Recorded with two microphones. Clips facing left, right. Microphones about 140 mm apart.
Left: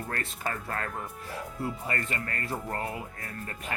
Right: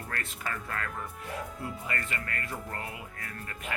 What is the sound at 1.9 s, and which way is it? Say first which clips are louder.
Speech: left 2 dB; 35° left (ahead or behind).